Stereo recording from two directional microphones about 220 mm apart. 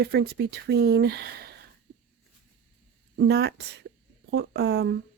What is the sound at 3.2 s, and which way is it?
Speech, 45° right (ahead or behind).